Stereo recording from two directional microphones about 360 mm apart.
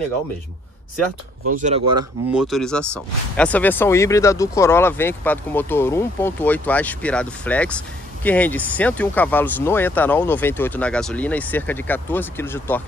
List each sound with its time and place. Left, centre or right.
1.6 s speech: centre
2.3 s speech: centre